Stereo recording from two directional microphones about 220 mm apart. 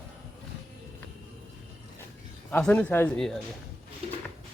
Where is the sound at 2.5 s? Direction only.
5° left (ahead or behind).